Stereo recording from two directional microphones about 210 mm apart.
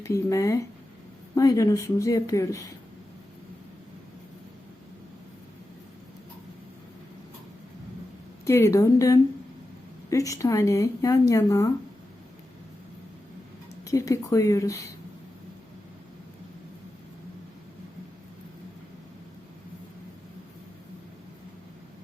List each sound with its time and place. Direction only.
0.0 s speech: 15° left (ahead or behind)
8.4 s speech: 10° left (ahead or behind)
13.8 s speech: 15° left (ahead or behind)